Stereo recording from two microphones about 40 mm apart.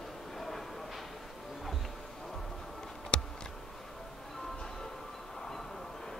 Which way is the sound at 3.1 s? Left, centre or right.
Left.